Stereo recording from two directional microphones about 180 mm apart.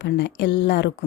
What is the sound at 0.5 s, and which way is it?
Speech, 65° left (ahead or behind).